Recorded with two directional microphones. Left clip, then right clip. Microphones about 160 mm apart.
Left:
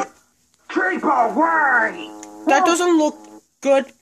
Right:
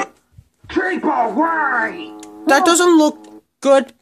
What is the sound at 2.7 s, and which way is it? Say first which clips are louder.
Speech: right 4 dB; 35° right (ahead or behind).